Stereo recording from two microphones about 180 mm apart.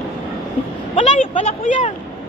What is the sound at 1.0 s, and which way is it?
Speech, 35° left (ahead or behind).